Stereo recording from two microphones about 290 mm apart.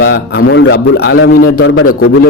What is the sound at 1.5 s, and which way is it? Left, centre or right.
Speech, left.